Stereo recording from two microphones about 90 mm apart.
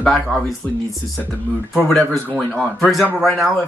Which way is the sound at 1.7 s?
5° left (ahead or behind).